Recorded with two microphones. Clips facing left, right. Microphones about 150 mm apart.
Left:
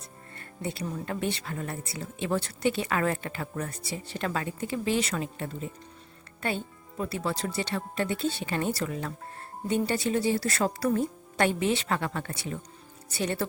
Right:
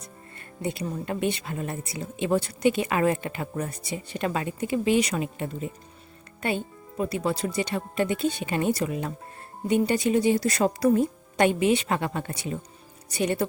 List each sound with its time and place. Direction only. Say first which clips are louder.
0.3 s speech: right 4 dB; 20° right (ahead or behind)